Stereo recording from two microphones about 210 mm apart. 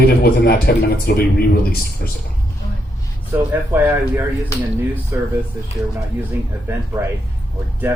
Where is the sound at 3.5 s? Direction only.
10° right (ahead or behind).